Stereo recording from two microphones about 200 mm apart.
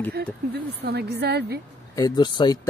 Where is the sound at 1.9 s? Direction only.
20° left (ahead or behind).